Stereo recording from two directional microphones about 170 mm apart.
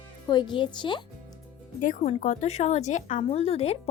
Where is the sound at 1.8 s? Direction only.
45° left (ahead or behind).